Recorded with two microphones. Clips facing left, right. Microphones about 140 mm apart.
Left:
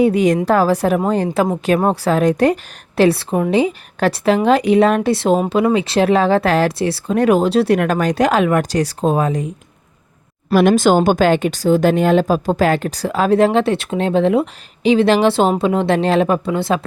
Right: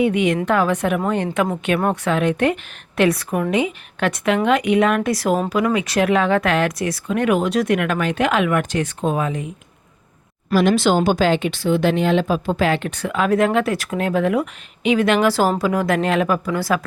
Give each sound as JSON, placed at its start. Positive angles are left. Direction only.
{"t": 0.0, "sound": "speech", "side_deg": 35}
{"t": 10.5, "sound": "a woman's voice", "side_deg": 55}